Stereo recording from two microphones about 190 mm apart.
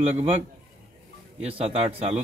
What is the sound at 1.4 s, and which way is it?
Speech, 35° right (ahead or behind).